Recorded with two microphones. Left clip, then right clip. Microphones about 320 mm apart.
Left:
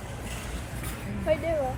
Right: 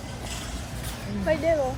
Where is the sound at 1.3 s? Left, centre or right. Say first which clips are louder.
Right 1 dB; right.